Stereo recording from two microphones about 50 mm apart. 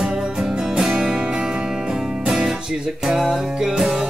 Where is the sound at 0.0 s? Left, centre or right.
Centre.